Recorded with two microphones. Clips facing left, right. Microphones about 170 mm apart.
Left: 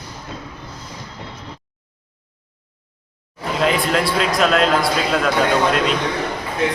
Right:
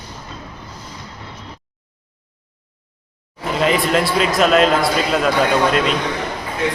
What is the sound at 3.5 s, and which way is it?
A man's voice, centre (ahead or behind).